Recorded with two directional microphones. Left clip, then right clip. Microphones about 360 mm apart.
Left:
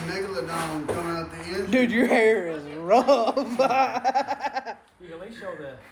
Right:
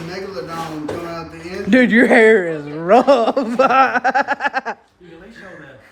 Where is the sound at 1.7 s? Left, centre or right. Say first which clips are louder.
Right 10 dB; right.